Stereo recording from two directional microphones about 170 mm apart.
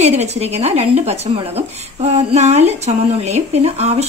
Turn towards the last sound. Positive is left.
turn(degrees=-40)  # may be behind; listen again after turning